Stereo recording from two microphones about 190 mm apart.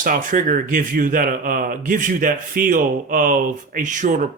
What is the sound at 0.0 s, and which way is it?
Speech, 45° right (ahead or behind).